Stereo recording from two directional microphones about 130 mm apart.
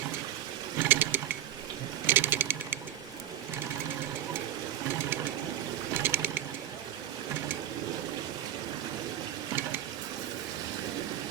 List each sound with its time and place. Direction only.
0.8 s sewing machine: 15° right (ahead or behind)
2.0 s a sound: 15° right (ahead or behind)
5.9 s sewing machine: 15° right (ahead or behind)